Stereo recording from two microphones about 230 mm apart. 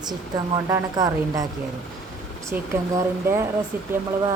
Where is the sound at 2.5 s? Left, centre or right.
Centre.